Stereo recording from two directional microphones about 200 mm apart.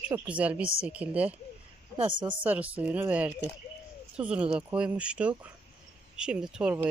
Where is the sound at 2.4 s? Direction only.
5° right (ahead or behind).